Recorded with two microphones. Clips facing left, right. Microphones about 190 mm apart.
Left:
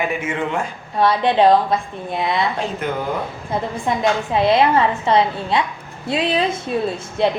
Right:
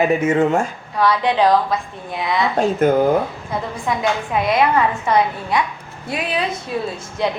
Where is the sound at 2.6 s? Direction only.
45° right (ahead or behind).